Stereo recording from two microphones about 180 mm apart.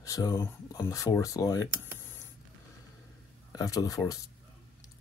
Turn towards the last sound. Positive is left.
turn(degrees=20)  # may be behind; listen again after turning